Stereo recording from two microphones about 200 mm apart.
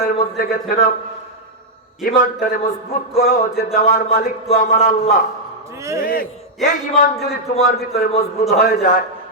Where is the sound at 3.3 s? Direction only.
45° left (ahead or behind).